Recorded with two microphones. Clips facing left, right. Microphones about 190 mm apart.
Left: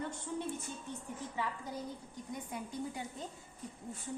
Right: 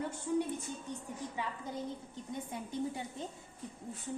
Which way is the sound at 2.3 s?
25° right (ahead or behind).